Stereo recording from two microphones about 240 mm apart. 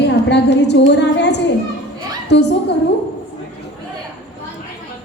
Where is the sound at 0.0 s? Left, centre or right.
Left.